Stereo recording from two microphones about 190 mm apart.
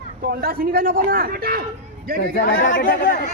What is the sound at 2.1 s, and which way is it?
A man's voice, 45° left (ahead or behind).